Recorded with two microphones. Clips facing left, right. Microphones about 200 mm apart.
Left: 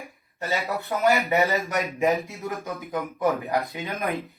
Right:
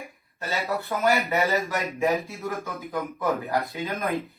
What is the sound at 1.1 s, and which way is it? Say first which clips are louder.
Speech: left 1 dB; 15° left (ahead or behind).